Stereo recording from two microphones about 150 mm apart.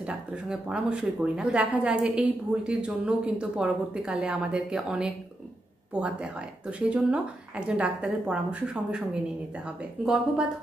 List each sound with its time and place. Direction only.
0.0 s speech: 5° right (ahead or behind)
10.0 s speech: 5° right (ahead or behind)